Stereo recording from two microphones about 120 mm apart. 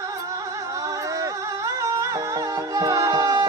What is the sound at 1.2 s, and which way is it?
Music, 25° right (ahead or behind).